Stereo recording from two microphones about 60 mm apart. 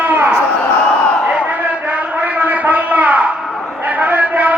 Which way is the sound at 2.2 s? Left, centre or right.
Right.